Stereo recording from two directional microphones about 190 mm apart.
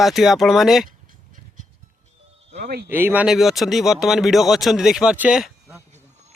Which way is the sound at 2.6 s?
55° right (ahead or behind).